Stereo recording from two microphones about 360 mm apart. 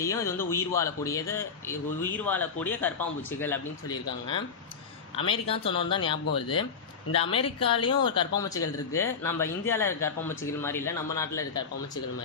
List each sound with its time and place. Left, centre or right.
0.0 s speech: centre